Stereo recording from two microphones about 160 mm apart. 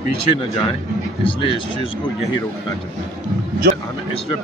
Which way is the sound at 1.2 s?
35° left (ahead or behind).